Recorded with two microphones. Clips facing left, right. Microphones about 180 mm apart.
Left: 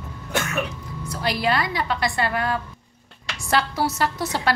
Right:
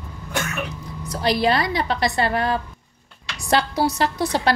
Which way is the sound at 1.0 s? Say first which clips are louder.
Right 4 dB; 35° right (ahead or behind).